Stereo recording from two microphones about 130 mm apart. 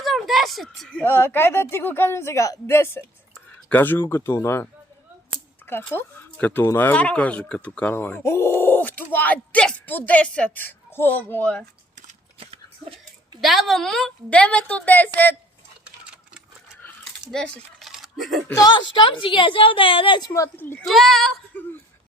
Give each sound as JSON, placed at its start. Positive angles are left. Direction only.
{"t": 0.0, "sound": "a sound", "side_deg": 0}
{"t": 0.8, "sound": "speech", "side_deg": 5}
{"t": 1.0, "sound": "speech", "side_deg": 15}
{"t": 13.4, "sound": "speech", "side_deg": 0}
{"t": 17.3, "sound": "speech", "side_deg": 0}
{"t": 18.5, "sound": "a woman's voice", "side_deg": 30}
{"t": 20.3, "sound": "speech", "side_deg": 20}
{"t": 20.8, "sound": "speech", "side_deg": 0}
{"t": 21.5, "sound": "speech", "side_deg": 15}